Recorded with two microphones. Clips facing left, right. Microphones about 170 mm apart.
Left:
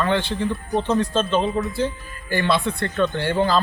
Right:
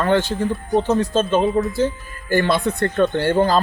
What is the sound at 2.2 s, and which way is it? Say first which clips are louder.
Speech: right 3 dB; 45° right (ahead or behind).